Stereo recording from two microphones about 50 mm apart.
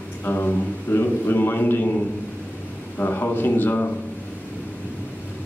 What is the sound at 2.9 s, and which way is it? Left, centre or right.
Speech, left.